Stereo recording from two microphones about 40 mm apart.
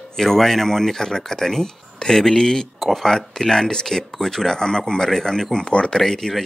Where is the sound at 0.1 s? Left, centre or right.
Centre.